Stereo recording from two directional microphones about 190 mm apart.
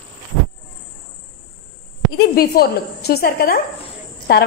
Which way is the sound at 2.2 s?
55° left (ahead or behind).